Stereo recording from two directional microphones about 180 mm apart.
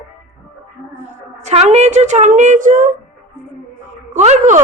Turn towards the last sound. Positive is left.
turn(degrees=-40)  # may be behind; listen again after turning